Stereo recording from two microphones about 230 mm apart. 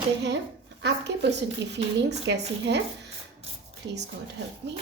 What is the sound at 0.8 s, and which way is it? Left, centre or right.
A woman's voice, right.